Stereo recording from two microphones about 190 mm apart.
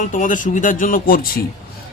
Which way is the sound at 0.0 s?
45° left (ahead or behind).